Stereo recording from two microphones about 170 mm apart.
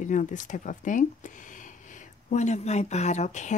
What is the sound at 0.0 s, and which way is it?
Speech, 45° left (ahead or behind).